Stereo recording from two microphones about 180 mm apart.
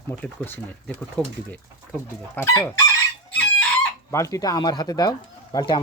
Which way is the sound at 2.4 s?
10° left (ahead or behind).